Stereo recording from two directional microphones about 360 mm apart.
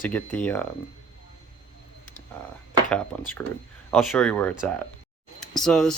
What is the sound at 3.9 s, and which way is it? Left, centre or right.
Speech, centre.